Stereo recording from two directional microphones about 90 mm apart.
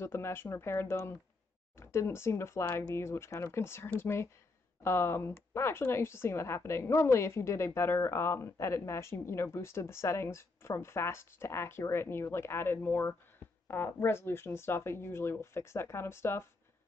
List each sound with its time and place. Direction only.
0.0 s speech: 30° left (ahead or behind)